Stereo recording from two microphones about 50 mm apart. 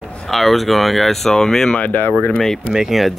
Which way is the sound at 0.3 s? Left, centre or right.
Centre.